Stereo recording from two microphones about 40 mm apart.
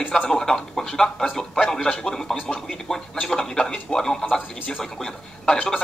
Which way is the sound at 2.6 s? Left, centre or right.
Centre.